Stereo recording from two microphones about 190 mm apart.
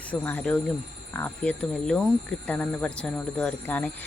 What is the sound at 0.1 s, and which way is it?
Speech, 10° left (ahead or behind).